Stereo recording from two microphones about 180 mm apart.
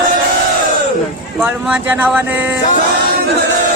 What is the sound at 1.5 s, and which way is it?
Speech, 10° right (ahead or behind).